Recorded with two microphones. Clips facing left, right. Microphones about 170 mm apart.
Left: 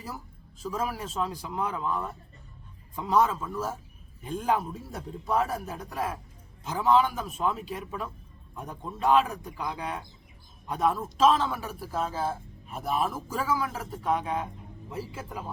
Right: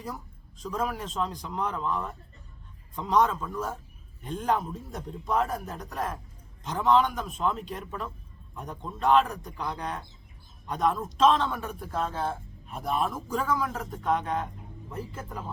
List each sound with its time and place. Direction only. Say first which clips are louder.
0.6 s a man's voice: right 1 dB; 5° left (ahead or behind)